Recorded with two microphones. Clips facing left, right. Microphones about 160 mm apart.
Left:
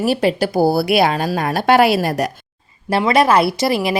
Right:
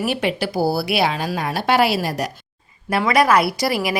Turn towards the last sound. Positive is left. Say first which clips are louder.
# left 3 dB
turn(degrees=25)  # may be behind; listen again after turning